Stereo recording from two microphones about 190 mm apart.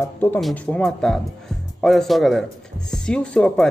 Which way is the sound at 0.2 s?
5° left (ahead or behind).